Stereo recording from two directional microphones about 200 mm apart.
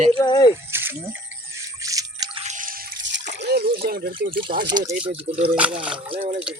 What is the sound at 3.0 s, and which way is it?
Splash, 60° right (ahead or behind).